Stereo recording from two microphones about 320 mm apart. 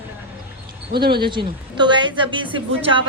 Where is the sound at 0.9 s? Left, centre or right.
Right.